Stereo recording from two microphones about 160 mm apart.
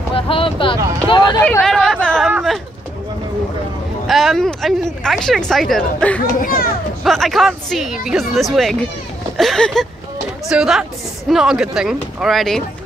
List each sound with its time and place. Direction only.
0.1 s a sound: 35° left (ahead or behind)
1.0 s speech: 30° left (ahead or behind)
1.4 s chatter: 5° left (ahead or behind)
2.3 s a sound: centre (ahead or behind)
4.1 s speech: centre (ahead or behind)
6.4 s a child's voice: 65° left (ahead or behind)
7.0 s speech: centre (ahead or behind)